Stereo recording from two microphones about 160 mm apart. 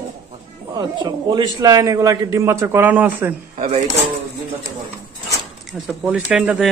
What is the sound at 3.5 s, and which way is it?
Speech, 45° right (ahead or behind).